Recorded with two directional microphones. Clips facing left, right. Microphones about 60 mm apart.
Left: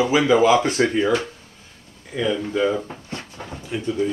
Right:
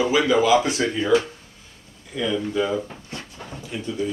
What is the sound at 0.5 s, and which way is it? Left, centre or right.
Speech, left.